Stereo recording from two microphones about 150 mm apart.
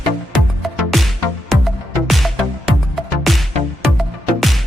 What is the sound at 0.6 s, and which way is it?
Music, centre (ahead or behind).